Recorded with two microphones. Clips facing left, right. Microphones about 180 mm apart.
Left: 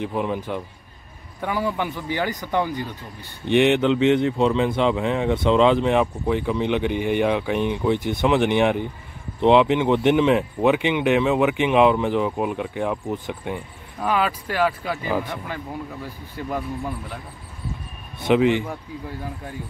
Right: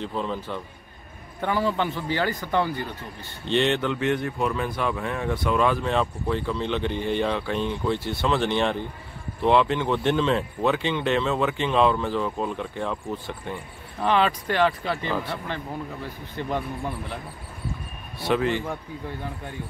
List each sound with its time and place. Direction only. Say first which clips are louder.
0.0 s speech: left 4 dB; 15° left (ahead or behind)
18.2 s speech: left 6 dB; 15° left (ahead or behind)